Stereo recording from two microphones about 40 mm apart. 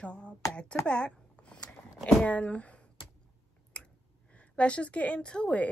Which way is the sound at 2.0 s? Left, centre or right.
Left.